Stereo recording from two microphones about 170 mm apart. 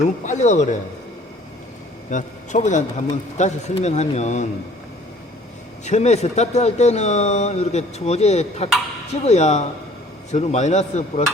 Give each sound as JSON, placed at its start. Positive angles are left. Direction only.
{"t": 0.3, "sound": "a man's voice", "side_deg": 45}
{"t": 2.0, "sound": "a man's voice", "side_deg": 45}
{"t": 5.8, "sound": "speech", "side_deg": 40}